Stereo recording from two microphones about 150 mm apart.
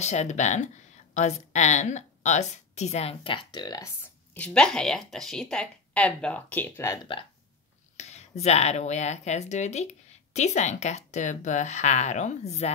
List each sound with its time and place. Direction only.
0.0 s a woman's voice: 50° left (ahead or behind); by 3.9 s 25° left (ahead or behind)
4.3 s speech: 5° left (ahead or behind)
8.0 s a woman's voice: 50° left (ahead or behind)